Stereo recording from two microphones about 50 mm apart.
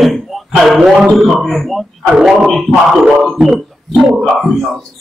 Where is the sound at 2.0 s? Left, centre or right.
Centre.